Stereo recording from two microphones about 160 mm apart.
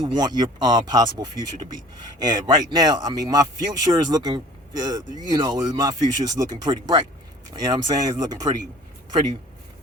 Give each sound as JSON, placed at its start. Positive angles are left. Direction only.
{"t": 0.0, "sound": "a man's voice", "side_deg": -25}